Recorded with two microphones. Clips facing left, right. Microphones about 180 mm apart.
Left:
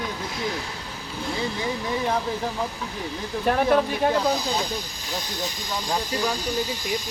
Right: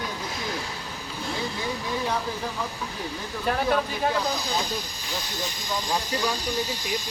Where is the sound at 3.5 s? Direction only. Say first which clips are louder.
Left 4 dB; 50° left (ahead or behind).